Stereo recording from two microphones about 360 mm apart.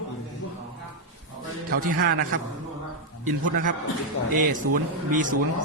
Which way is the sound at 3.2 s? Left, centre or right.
Right.